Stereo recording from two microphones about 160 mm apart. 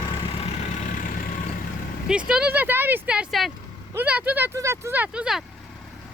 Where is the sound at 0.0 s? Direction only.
30° left (ahead or behind); by 1.1 s 55° left (ahead or behind).